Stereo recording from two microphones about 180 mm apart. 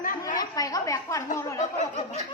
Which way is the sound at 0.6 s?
20° left (ahead or behind).